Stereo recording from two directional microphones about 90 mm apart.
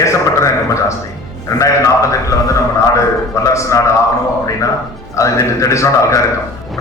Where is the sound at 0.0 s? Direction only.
35° left (ahead or behind).